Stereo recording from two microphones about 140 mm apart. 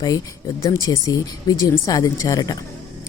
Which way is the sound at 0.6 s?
25° left (ahead or behind).